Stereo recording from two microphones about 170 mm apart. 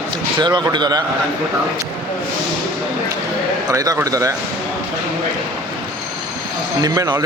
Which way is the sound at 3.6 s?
20° right (ahead or behind).